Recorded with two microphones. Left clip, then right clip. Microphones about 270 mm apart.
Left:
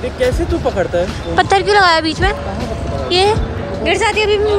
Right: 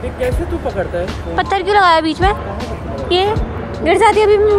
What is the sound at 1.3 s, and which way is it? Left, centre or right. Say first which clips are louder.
Speech: left 2 dB; centre.